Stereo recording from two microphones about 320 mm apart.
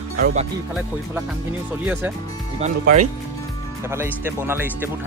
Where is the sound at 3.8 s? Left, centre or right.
Centre.